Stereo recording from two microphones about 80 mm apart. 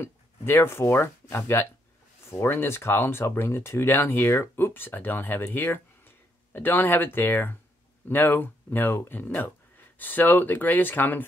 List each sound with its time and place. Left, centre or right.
0.0 s speech: left